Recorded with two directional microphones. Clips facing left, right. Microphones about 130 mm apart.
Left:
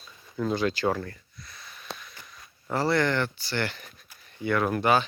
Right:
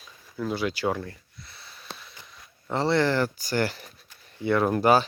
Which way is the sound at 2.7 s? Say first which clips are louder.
Right 2 dB; 25° right (ahead or behind).